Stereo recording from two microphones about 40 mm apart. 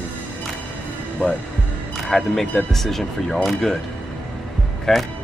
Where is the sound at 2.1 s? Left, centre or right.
Centre.